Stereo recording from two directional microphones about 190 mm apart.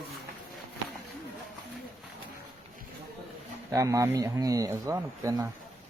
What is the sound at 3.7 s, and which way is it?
Speech, 15° right (ahead or behind).